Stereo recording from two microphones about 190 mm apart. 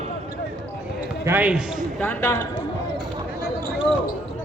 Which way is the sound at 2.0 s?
10° left (ahead or behind).